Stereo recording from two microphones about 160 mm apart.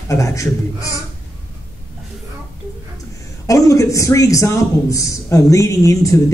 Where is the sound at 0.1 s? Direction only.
20° left (ahead or behind).